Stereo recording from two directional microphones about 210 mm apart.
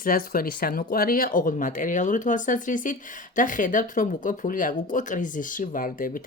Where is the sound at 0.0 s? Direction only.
45° left (ahead or behind).